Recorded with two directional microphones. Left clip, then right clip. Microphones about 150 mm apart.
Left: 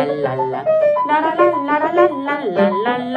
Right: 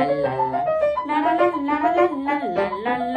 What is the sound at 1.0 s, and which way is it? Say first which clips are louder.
Music: left 5 dB; 20° right (ahead or behind).